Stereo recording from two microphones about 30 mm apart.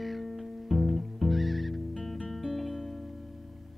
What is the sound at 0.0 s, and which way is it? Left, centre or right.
Music, centre.